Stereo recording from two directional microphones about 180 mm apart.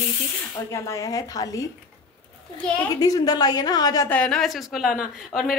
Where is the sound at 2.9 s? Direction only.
20° left (ahead or behind).